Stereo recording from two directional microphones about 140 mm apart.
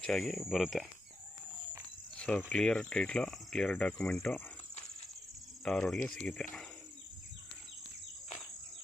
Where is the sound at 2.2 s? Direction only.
10° left (ahead or behind).